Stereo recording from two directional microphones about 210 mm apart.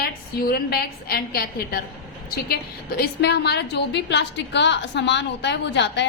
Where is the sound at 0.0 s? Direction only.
45° left (ahead or behind).